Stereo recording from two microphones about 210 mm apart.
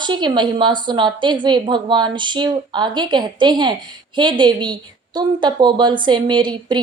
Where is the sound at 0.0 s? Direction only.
20° right (ahead or behind).